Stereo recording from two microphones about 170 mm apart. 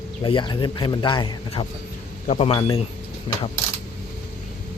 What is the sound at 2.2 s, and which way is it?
Speech, 40° left (ahead or behind).